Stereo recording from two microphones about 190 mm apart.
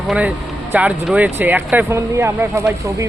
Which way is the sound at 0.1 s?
5° right (ahead or behind).